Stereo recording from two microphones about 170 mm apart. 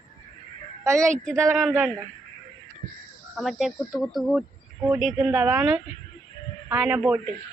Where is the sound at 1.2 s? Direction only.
Centre (ahead or behind).